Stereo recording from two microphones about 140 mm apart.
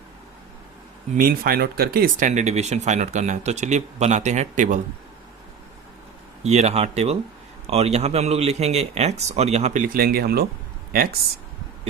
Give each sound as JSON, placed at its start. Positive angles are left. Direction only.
{"t": 1.1, "sound": "speech", "side_deg": -90}
{"t": 6.4, "sound": "speech", "side_deg": -50}
{"t": 9.8, "sound": "speech", "side_deg": -90}